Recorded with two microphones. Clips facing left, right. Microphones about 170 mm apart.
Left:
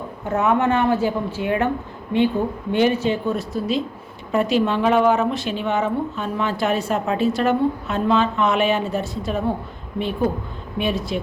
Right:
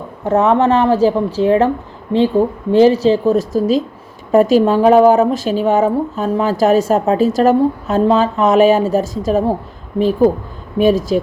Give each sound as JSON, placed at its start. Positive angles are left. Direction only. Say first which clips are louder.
{"t": 0.3, "sound": "a woman's voice", "louder": "right 7 dB", "side_deg": -30}